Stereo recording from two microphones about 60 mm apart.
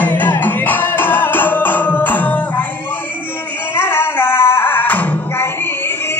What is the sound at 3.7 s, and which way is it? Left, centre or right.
Music, left.